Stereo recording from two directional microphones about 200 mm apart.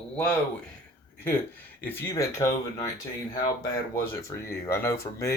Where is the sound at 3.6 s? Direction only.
15° left (ahead or behind).